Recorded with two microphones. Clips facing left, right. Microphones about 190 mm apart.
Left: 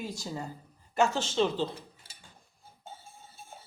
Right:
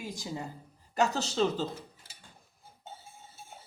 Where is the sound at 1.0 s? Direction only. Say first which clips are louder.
Left 1 dB; 40° right (ahead or behind).